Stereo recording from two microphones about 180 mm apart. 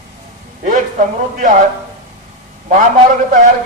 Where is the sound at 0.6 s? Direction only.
45° right (ahead or behind).